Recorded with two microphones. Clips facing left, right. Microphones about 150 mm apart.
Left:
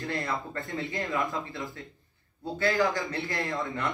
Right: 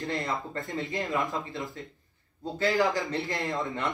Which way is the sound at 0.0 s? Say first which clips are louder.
Right 1 dB; 20° right (ahead or behind).